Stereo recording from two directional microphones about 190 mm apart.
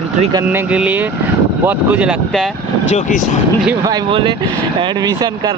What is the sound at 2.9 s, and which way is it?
Speech, 40° left (ahead or behind).